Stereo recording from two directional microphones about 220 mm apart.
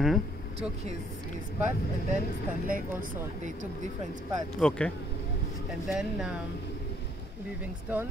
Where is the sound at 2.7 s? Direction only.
40° right (ahead or behind).